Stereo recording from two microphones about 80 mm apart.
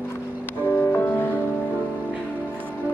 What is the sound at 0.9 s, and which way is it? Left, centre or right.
Music, left.